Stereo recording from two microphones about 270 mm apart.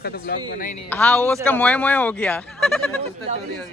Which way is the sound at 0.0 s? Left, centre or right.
Left.